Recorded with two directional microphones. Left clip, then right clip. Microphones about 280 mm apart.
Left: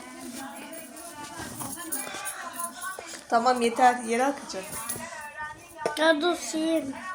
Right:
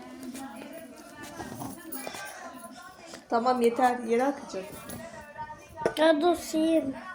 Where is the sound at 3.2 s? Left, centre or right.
Left.